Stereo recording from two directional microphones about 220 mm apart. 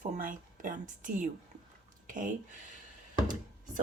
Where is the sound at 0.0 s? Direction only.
35° right (ahead or behind).